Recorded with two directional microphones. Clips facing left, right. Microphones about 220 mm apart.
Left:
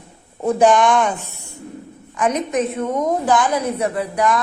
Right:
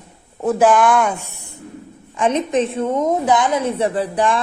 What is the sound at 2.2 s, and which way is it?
A woman's voice, 25° right (ahead or behind).